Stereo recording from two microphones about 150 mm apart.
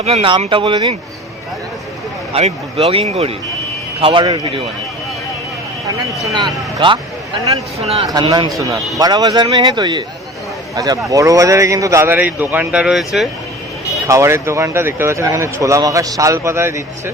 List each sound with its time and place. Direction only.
0.0 s speech: 40° right (ahead or behind)
2.3 s speech: 40° right (ahead or behind)
4.0 s speech: 30° right (ahead or behind)
6.3 s speech: 30° right (ahead or behind)
7.8 s speech: 40° right (ahead or behind)
8.0 s a man's voice: 25° right (ahead or behind); by 13.2 s centre (ahead or behind)
14.1 s speech: 20° right (ahead or behind)